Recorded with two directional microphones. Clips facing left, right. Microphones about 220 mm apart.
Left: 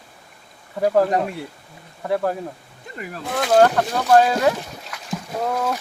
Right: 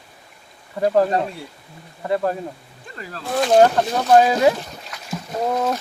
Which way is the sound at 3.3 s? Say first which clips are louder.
Right 1 dB; 20° right (ahead or behind).